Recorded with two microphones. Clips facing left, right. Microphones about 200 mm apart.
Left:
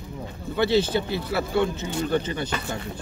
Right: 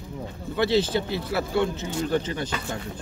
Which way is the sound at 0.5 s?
Centre (ahead or behind).